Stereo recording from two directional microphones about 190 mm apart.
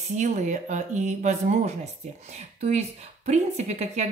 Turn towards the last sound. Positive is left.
turn(degrees=-35)  # may be behind; listen again after turning